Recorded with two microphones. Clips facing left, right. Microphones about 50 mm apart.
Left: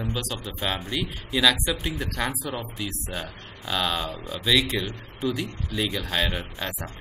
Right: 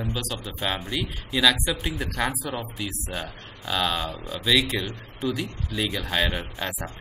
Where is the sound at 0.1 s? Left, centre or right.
Centre.